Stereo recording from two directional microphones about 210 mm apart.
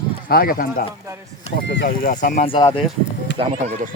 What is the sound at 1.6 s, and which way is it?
Speech, 55° left (ahead or behind).